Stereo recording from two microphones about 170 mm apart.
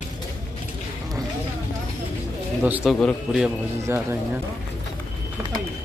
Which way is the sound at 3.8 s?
15° right (ahead or behind).